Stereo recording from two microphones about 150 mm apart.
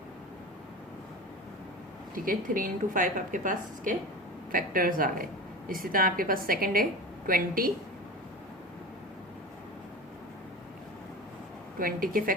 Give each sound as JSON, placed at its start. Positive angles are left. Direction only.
{"t": 2.1, "sound": "a woman's voice", "side_deg": -70}
{"t": 11.8, "sound": "a woman's voice", "side_deg": -70}